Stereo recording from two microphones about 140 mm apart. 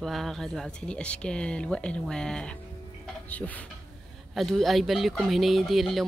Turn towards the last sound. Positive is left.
turn(degrees=0)  # may be behind; listen again after turning